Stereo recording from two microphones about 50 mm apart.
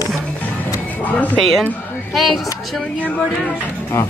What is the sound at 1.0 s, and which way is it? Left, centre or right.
Speech, left.